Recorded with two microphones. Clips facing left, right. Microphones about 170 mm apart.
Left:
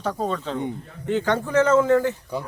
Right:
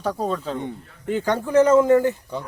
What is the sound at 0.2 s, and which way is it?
A man's voice, 5° right (ahead or behind).